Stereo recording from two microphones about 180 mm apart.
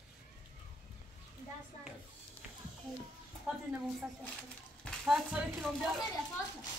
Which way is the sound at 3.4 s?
5° right (ahead or behind).